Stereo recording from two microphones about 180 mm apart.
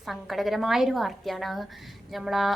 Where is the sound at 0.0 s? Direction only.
Centre (ahead or behind).